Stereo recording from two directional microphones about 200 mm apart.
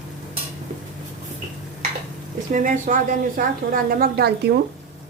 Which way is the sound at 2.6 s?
40° right (ahead or behind).